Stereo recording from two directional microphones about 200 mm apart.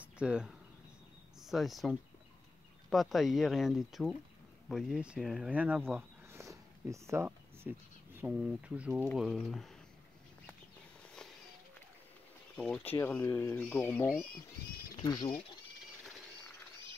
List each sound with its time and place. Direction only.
0.0 s a sound: 5° right (ahead or behind)
1.4 s speech: centre (ahead or behind)
12.5 s speech: 5° left (ahead or behind)
15.0 s speech: 20° left (ahead or behind)